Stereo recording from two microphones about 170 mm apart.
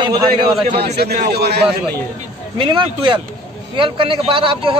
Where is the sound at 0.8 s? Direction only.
70° right (ahead or behind).